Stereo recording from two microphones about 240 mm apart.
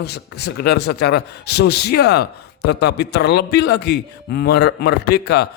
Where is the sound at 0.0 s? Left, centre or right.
Left.